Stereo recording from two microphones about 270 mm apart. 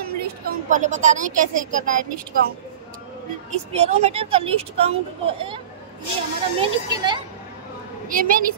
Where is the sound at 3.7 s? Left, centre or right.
Right.